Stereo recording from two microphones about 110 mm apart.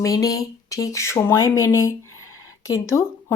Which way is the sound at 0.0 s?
30° left (ahead or behind).